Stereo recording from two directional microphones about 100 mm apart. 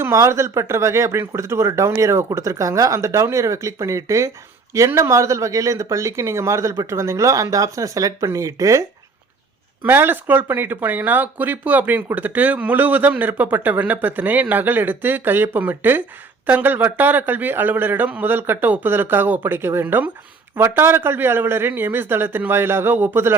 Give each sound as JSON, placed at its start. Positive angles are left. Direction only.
{"t": 0.0, "sound": "a man's voice", "side_deg": -30}
{"t": 9.8, "sound": "a man's voice", "side_deg": -20}